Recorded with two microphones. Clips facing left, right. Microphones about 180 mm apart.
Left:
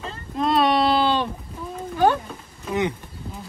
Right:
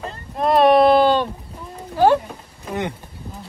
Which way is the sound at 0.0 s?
55° right (ahead or behind).